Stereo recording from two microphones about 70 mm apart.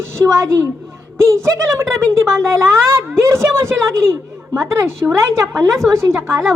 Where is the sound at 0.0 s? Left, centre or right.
Right.